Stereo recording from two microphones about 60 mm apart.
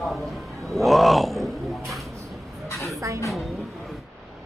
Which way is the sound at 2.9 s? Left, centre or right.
Right.